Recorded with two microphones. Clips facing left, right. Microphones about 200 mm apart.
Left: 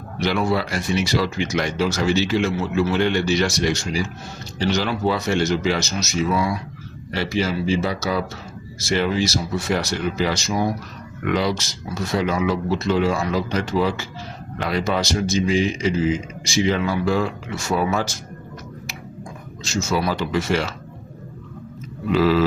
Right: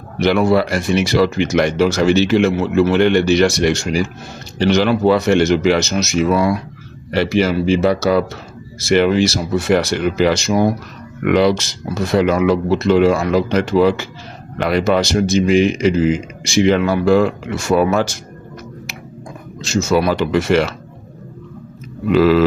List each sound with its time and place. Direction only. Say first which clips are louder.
0.2 s a man's voice: right 7 dB; 60° right (ahead or behind)
19.6 s a man's voice: right 7 dB; 65° right (ahead or behind)
22.1 s a man's voice: right 6 dB; 65° right (ahead or behind)